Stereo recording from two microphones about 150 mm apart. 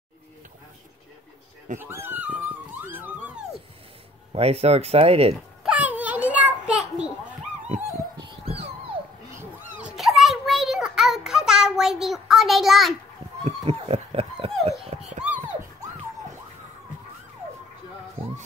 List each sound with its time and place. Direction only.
1.8 s speech: 15° right (ahead or behind)
4.3 s speech: 40° right (ahead or behind)
5.6 s a sound: 10° right (ahead or behind)
8.2 s dog: 40° right (ahead or behind)
9.4 s a sound: 10° right (ahead or behind)
13.4 s dog: 40° right (ahead or behind)